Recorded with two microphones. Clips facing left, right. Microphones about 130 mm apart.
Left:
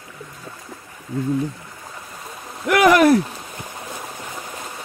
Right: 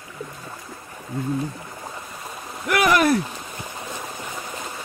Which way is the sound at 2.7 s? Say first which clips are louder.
Left 5 dB; 90° left.